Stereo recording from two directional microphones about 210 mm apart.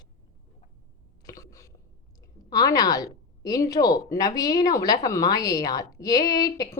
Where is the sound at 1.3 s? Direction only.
15° left (ahead or behind).